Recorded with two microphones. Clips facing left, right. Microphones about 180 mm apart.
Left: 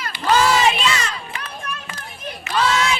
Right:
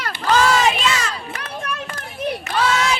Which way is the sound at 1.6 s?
50° right (ahead or behind).